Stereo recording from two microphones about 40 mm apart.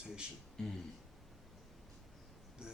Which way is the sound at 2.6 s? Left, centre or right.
Right.